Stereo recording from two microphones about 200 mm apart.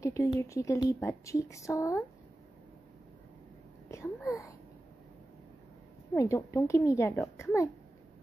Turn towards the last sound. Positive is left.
turn(degrees=15)  # may be behind; listen again after turning